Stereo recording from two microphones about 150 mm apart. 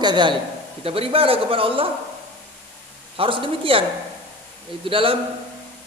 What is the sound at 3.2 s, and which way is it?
Speech, 35° right (ahead or behind).